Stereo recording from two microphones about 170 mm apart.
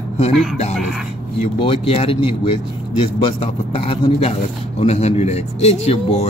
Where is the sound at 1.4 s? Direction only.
35° left (ahead or behind).